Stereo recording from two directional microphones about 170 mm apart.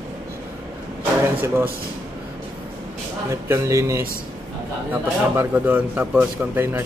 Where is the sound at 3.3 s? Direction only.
15° right (ahead or behind).